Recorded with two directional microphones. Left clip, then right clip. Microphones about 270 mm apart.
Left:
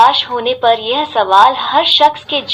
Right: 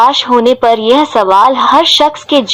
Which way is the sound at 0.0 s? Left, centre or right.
Right.